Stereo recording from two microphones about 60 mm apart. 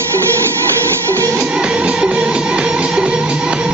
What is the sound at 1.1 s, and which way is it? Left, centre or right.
Music, right.